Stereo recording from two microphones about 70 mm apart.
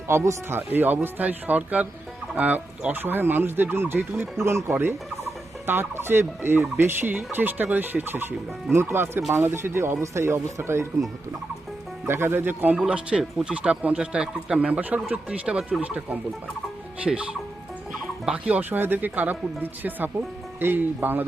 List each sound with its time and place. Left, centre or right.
0.1 s fowl: right
0.7 s speech: right
4.4 s fowl: right
7.3 s speech: right
8.7 s fowl: right
12.0 s fowl: right
12.8 s speech: centre
18.3 s speech: right